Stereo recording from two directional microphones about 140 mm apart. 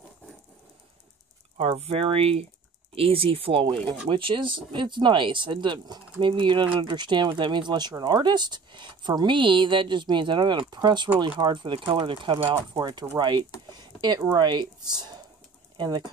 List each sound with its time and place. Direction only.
1.6 s speech: 45° right (ahead or behind)
13.7 s a sound: 30° right (ahead or behind)
14.3 s speech: 35° right (ahead or behind)